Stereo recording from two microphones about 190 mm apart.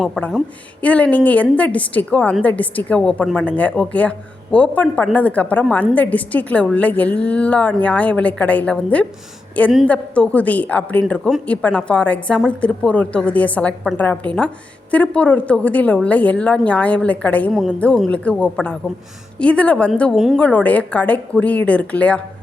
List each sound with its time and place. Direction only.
0.0 s a woman's voice: centre (ahead or behind)